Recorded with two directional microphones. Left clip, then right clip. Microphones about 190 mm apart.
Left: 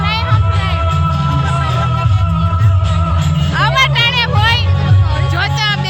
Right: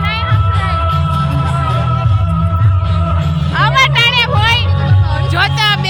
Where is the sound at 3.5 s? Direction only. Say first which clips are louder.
Right 2 dB; 10° right (ahead or behind).